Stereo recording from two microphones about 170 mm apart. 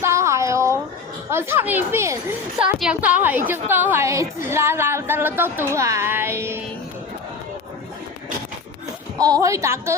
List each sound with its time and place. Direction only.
0.0 s a sound: 15° right (ahead or behind)
1.3 s a woman's voice: 15° right (ahead or behind)
2.6 s a woman's voice: 5° right (ahead or behind)
9.1 s a woman's voice: 20° right (ahead or behind)